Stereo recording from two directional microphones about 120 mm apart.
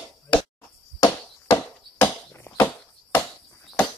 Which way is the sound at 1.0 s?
25° left (ahead or behind).